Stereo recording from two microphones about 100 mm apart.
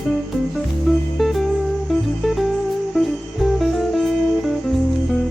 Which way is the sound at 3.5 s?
Centre (ahead or behind).